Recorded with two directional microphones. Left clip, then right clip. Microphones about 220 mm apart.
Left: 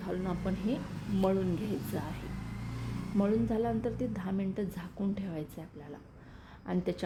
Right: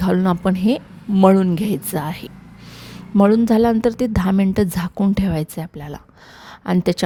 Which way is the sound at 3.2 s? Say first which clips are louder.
Right 16 dB; 50° right (ahead or behind).